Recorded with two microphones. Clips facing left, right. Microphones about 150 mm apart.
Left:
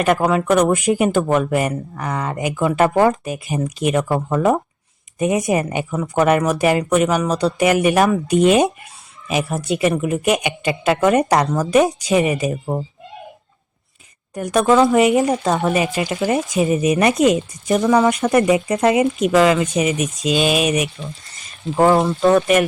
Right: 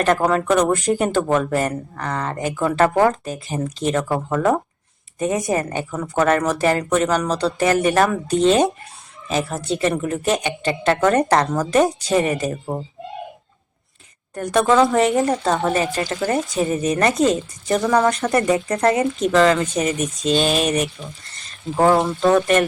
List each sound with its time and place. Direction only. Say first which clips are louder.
0.0 s speech: left 1 dB; 10° left (ahead or behind)
10.0 s speech: left 2 dB; 10° left (ahead or behind)
14.4 s speech: left 2 dB; 5° left (ahead or behind)
18.3 s speech: left 3 dB; 15° left (ahead or behind)
21.3 s a sound: left 2 dB; 10° left (ahead or behind)
22.2 s speech: left 2 dB; 5° left (ahead or behind)